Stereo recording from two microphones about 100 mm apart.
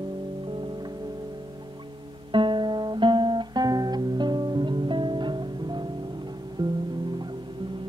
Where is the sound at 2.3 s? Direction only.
55° right (ahead or behind).